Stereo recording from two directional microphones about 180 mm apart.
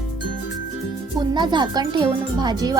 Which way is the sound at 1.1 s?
25° right (ahead or behind).